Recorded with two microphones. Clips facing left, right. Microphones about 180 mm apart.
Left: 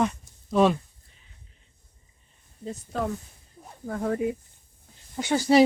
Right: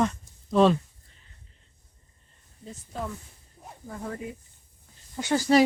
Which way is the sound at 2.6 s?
75° left (ahead or behind).